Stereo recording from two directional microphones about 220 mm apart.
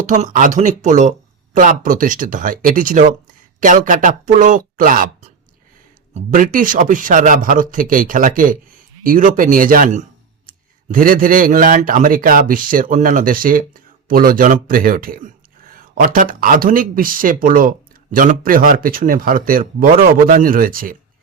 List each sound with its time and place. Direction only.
0.0 s speech: 35° right (ahead or behind)
6.1 s speech: 40° right (ahead or behind)